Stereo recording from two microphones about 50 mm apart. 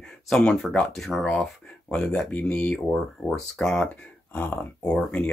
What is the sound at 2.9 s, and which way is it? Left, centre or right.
Speech, centre.